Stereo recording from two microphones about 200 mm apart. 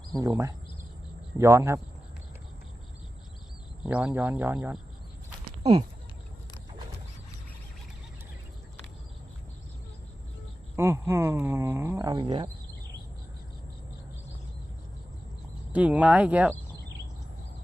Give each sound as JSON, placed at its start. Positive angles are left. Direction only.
{"t": 0.2, "sound": "speech", "side_deg": -15}
{"t": 3.8, "sound": "speech", "side_deg": -5}
{"t": 10.8, "sound": "speech", "side_deg": -10}
{"t": 15.7, "sound": "speech", "side_deg": -5}